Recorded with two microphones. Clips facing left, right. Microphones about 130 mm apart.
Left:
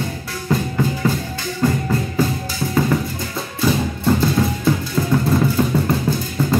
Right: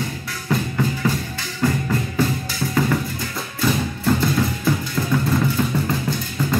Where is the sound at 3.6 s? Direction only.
20° left (ahead or behind).